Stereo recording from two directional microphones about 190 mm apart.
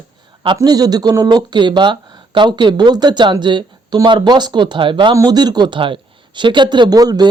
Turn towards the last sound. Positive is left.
turn(degrees=-20)  # may be behind; listen again after turning